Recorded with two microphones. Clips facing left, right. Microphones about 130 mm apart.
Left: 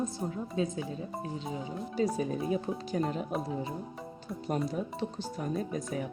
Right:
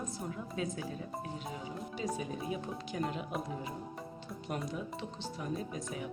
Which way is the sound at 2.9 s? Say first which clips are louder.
Left 5 dB; 35° left (ahead or behind).